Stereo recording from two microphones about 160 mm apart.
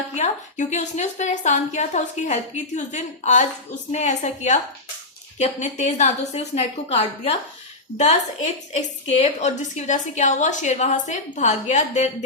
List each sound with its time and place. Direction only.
0.1 s a woman's voice: 45° left (ahead or behind)
8.7 s a woman's voice: 45° left (ahead or behind)